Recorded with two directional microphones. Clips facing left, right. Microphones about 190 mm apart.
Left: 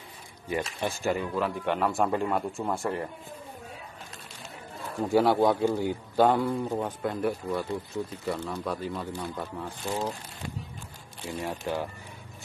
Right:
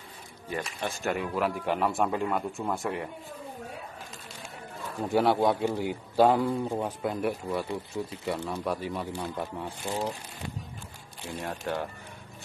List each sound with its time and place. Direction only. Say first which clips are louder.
0.5 s speech: left 3 dB; 15° left (ahead or behind)
1.0 s a man's voice: even; 5° right (ahead or behind)
5.1 s a man's voice: left 2 dB; centre (ahead or behind); by 10.0 s 15° right (ahead or behind)
11.2 s a man's voice: left 1 dB; 5° left (ahead or behind)